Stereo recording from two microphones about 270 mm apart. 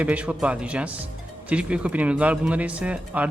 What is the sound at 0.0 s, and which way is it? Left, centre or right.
A man's voice, centre.